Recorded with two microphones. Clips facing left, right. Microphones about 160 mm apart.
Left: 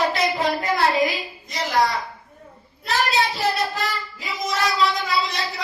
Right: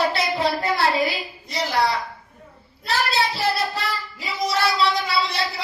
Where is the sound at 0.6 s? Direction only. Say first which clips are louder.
Left 1 dB; 30° right (ahead or behind).